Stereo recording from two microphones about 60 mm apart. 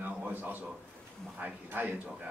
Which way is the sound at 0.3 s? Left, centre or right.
Right.